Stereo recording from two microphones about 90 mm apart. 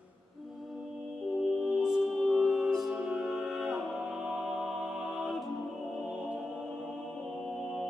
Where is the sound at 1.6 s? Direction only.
10° right (ahead or behind).